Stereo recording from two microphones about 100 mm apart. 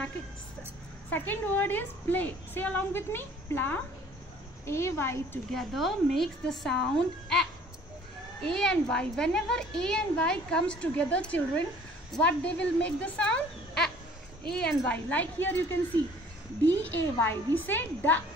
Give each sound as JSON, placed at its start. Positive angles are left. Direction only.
{"t": 1.1, "sound": "a woman's voice", "side_deg": 20}
{"t": 5.5, "sound": "a child's voice", "side_deg": 0}